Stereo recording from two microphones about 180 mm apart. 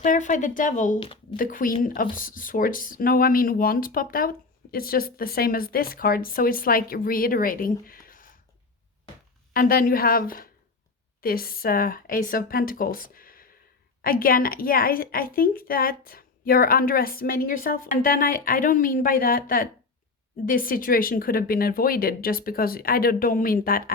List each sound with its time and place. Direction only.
0.0 s speech: 45° left (ahead or behind)
0.9 s speech: 30° left (ahead or behind)
1.4 s speech: 50° left (ahead or behind)
9.5 s speech: 55° left (ahead or behind)